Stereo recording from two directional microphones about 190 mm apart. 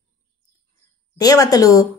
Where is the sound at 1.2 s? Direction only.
20° left (ahead or behind).